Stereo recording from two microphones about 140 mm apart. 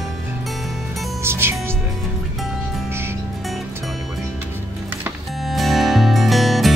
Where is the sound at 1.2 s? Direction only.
15° right (ahead or behind).